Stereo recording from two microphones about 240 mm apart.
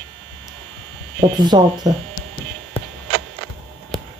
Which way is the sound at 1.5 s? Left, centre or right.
Centre.